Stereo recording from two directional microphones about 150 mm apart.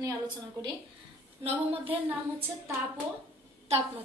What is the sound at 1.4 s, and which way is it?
Speech, 40° right (ahead or behind).